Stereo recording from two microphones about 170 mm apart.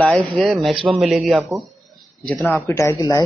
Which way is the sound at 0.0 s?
10° left (ahead or behind).